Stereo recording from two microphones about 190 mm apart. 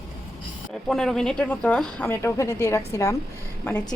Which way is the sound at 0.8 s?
Centre (ahead or behind).